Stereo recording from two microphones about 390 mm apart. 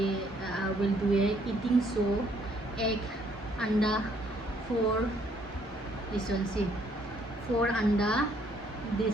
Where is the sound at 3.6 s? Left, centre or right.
Centre.